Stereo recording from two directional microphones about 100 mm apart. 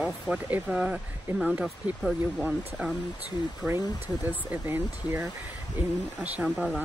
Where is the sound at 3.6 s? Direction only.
20° right (ahead or behind).